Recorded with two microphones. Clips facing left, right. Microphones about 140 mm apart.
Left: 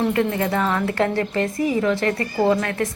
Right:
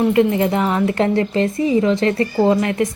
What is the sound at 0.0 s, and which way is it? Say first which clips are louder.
A woman's voice: right 5 dB; 20° right (ahead or behind).